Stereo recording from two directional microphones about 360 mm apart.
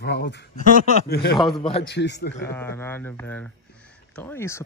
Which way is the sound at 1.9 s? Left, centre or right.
Left.